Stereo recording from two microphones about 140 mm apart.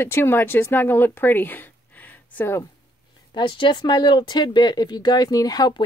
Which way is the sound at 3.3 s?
35° left (ahead or behind).